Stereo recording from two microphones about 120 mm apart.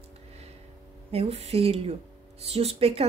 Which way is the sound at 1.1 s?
60° right (ahead or behind).